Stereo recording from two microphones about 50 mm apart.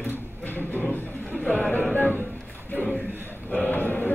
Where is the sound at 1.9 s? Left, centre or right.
Left.